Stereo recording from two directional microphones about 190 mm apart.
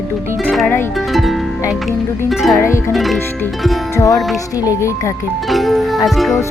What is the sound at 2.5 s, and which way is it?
Speech, 15° left (ahead or behind).